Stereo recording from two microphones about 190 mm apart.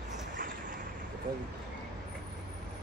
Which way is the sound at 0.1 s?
45° right (ahead or behind).